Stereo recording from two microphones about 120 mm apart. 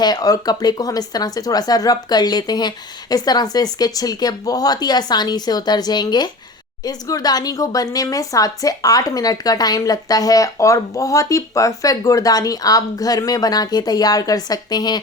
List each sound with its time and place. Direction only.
0.0 s speech: 35° left (ahead or behind)